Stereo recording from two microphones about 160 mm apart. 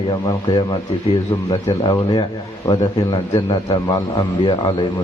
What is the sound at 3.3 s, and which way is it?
A man's voice, 20° left (ahead or behind).